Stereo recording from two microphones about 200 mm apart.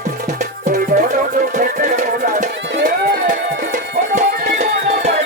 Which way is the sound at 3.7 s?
40° right (ahead or behind).